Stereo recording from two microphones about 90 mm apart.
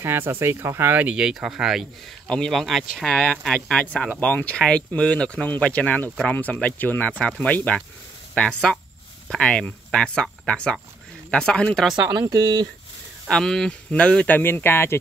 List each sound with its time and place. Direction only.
0.0 s speech: 25° right (ahead or behind); by 1.9 s 5° right (ahead or behind)
2.2 s speech: 5° left (ahead or behind)
3.1 s speech: 10° left (ahead or behind)
12.1 s speech: 50° right (ahead or behind)
13.3 s speech: 5° left (ahead or behind); by 15.0 s 25° left (ahead or behind)